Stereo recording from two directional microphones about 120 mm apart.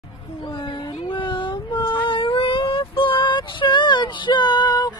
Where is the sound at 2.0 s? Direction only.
45° left (ahead or behind).